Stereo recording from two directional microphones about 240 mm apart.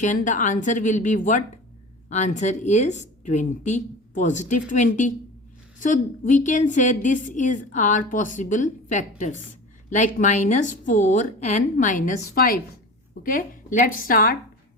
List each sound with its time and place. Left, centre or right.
0.0 s a woman's voice: left